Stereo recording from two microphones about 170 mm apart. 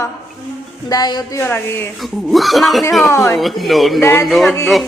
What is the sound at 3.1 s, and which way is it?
Speech, 20° left (ahead or behind).